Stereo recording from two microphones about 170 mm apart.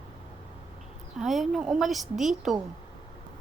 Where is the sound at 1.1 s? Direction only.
Centre (ahead or behind).